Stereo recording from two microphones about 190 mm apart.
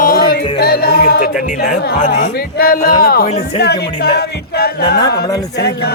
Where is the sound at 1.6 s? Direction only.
45° left (ahead or behind).